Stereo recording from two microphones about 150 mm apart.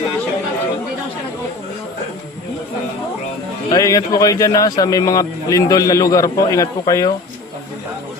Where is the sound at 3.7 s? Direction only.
25° left (ahead or behind).